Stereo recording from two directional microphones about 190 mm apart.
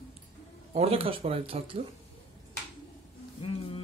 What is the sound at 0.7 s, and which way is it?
Speech, 30° right (ahead or behind).